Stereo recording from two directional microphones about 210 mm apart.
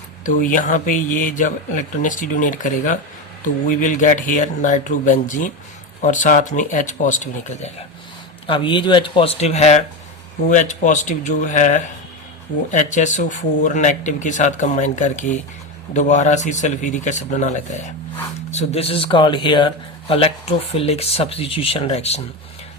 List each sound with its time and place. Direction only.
0.3 s speech: 40° left (ahead or behind)